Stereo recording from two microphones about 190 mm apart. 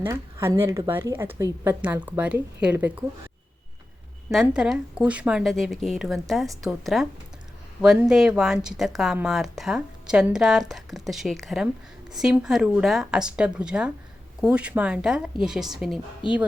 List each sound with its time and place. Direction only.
0.0 s speech: 15° right (ahead or behind)
4.3 s a woman's voice: 5° right (ahead or behind)
16.2 s speech: 25° left (ahead or behind)